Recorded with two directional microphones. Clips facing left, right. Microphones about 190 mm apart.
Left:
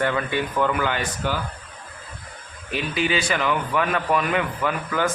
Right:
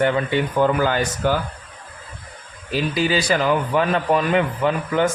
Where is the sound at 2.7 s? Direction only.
35° right (ahead or behind).